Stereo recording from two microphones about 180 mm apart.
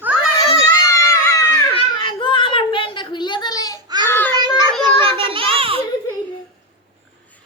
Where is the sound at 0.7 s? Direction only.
15° left (ahead or behind).